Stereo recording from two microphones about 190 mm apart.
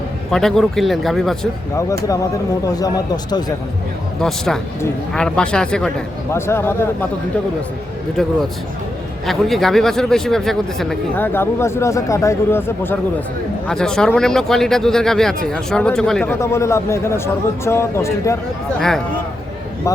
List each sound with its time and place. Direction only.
0.3 s a man's voice: centre (ahead or behind)
1.7 s a man's voice: 15° left (ahead or behind)
4.2 s a man's voice: centre (ahead or behind)
9.2 s a man's voice: centre (ahead or behind)
11.3 s a man's voice: 15° left (ahead or behind)
18.8 s a man's voice: centre (ahead or behind)